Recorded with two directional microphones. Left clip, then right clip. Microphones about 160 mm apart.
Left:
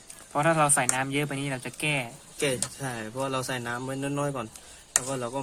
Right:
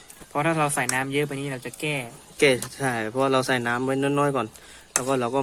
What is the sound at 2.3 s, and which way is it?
Speech, 45° right (ahead or behind).